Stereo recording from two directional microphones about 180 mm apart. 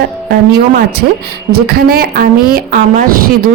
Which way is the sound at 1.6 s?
60° right (ahead or behind).